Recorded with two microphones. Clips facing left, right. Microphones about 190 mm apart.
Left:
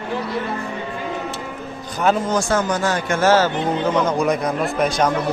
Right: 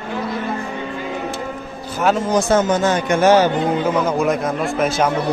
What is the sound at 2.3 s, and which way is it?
A man's voice, 20° right (ahead or behind).